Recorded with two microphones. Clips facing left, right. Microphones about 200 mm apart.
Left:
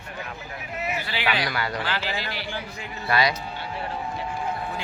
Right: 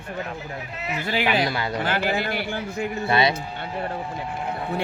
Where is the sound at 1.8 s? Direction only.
50° right (ahead or behind).